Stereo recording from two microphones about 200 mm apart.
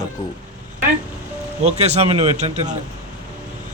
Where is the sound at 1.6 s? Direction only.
35° right (ahead or behind).